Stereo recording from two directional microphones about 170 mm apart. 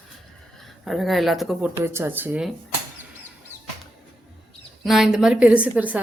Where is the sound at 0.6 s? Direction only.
Centre (ahead or behind).